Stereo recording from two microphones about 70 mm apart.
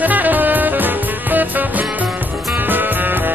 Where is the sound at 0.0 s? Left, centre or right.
Right.